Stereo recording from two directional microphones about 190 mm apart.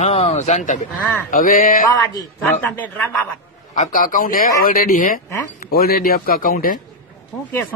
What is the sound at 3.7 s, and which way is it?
Speech, 40° left (ahead or behind).